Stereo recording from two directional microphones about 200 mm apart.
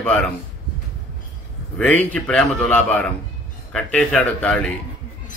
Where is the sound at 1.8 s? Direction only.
5° left (ahead or behind).